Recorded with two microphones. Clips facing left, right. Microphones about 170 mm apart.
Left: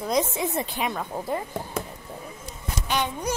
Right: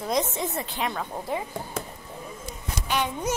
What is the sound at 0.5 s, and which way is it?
Speech, 15° left (ahead or behind).